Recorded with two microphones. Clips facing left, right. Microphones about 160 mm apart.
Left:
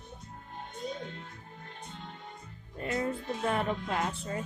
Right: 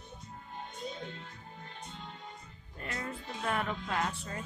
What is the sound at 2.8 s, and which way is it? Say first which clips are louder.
A woman's voice: left 8 dB; 25° left (ahead or behind).